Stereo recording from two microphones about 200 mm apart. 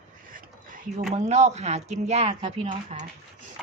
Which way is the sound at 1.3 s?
35° right (ahead or behind).